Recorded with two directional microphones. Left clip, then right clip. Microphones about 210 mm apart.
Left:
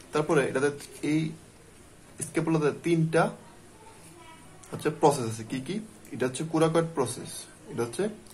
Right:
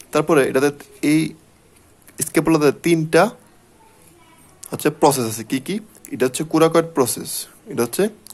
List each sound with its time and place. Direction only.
0.1 s speech: 45° right (ahead or behind)
4.6 s speech: 45° right (ahead or behind)